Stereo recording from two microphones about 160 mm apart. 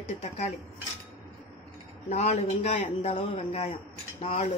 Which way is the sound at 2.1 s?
45° left (ahead or behind).